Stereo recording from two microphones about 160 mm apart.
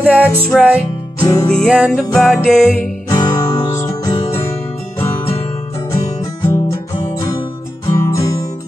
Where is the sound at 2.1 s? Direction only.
5° left (ahead or behind).